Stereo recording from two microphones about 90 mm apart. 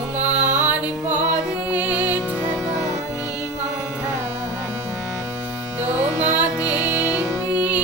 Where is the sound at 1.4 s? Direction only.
20° right (ahead or behind).